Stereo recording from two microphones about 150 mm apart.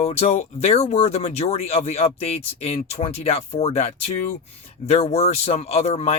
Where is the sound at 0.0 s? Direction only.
45° left (ahead or behind).